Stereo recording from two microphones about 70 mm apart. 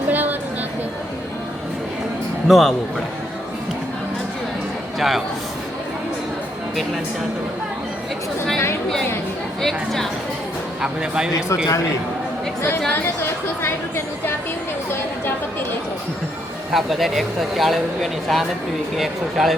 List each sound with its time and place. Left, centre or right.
0.1 s a sound: right
2.5 s speech: centre
4.9 s a man's voice: centre
9.6 s speech: centre
10.8 s speech: centre
12.9 s a woman's voice: left
16.7 s speech: centre